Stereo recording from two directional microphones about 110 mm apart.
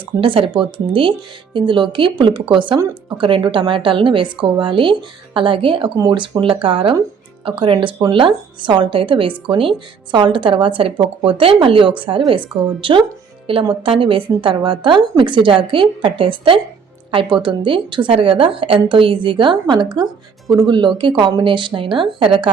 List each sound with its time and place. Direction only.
0.2 s a woman's voice: 50° right (ahead or behind)